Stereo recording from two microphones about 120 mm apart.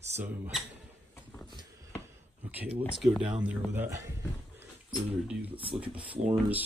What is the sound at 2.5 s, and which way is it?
Speech, 15° right (ahead or behind).